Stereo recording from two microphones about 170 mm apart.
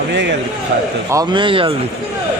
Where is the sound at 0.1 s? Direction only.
90° right.